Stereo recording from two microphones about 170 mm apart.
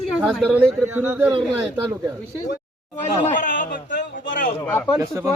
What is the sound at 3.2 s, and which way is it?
Speech, 50° left (ahead or behind).